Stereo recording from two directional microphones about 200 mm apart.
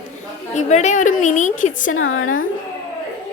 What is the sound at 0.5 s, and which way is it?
A woman's voice, 35° left (ahead or behind).